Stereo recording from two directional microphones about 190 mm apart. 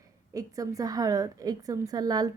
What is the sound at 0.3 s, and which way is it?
A woman's voice, 20° right (ahead or behind).